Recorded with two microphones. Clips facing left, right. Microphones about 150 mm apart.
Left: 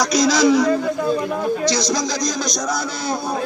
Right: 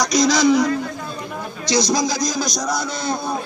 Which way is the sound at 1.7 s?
10° right (ahead or behind).